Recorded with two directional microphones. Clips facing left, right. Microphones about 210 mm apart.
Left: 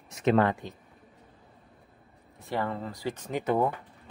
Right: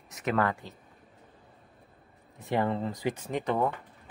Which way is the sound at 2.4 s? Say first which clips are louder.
Right 3 dB; 20° right (ahead or behind).